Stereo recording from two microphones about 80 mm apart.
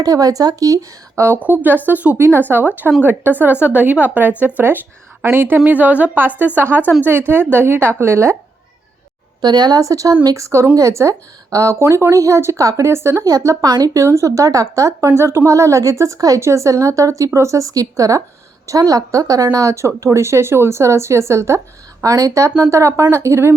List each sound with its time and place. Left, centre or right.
0.0 s speech: right
1.4 s a woman's voice: right
9.4 s speech: right
13.7 s speech: right
13.9 s speech: right